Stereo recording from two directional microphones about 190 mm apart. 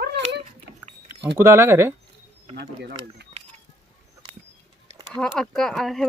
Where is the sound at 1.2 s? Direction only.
15° right (ahead or behind).